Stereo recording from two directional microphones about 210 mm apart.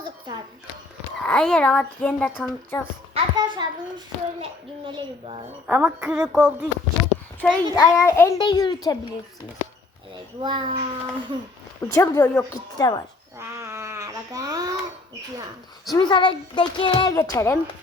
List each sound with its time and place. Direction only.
1.2 s speech: 5° left (ahead or behind)
3.2 s a child's voice: 20° right (ahead or behind)
5.6 s speech: 5° right (ahead or behind)
7.4 s a child's voice: 15° left (ahead or behind)
10.4 s a child's voice: 25° right (ahead or behind)
11.8 s a child's voice: 10° left (ahead or behind)
12.7 s a child's voice: 20° left (ahead or behind)
13.4 s a sound: 15° right (ahead or behind)
15.9 s a child's voice: 20° left (ahead or behind)